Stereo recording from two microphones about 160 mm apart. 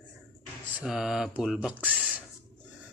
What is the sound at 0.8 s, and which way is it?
Speech, 5° right (ahead or behind).